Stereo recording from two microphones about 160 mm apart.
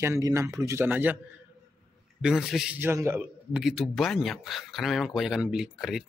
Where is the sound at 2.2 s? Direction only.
Centre (ahead or behind).